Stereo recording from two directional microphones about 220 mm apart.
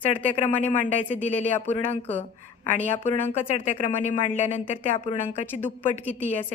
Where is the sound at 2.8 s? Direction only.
10° left (ahead or behind).